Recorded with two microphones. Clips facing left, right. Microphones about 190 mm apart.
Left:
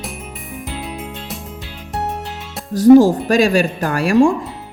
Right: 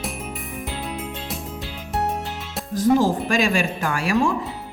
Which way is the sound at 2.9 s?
40° left (ahead or behind).